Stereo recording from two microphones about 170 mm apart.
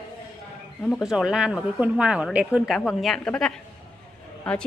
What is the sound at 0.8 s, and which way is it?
A woman's voice, centre (ahead or behind).